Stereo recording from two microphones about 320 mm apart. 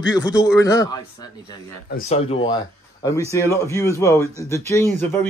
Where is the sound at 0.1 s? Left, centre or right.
Centre.